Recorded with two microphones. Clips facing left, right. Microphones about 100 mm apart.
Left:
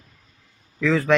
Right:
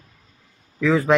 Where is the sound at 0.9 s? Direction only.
20° right (ahead or behind).